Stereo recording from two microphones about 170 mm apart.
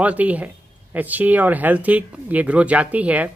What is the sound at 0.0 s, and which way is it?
Speech, 10° right (ahead or behind).